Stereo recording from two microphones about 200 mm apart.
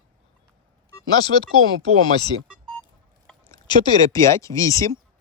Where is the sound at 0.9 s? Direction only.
20° left (ahead or behind).